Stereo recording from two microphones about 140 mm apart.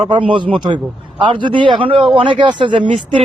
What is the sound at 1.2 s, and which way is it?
A man's voice, 35° right (ahead or behind).